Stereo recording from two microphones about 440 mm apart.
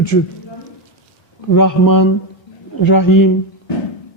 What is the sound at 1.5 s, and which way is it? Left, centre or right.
Speech, left.